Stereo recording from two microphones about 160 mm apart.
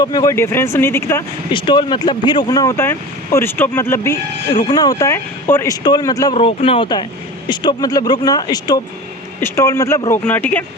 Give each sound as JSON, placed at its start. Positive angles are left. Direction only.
{"t": 0.0, "sound": "speech", "side_deg": 25}
{"t": 1.5, "sound": "speech", "side_deg": 30}
{"t": 6.3, "sound": "speech", "side_deg": 35}